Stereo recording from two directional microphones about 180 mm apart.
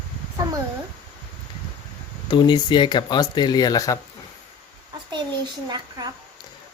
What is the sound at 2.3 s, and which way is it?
Speech, 25° left (ahead or behind).